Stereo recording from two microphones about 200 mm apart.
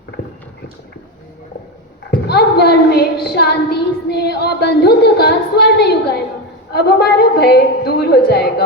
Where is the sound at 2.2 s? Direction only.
55° left (ahead or behind).